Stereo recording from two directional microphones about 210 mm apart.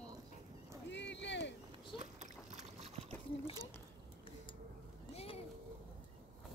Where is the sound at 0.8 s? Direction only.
55° left (ahead or behind).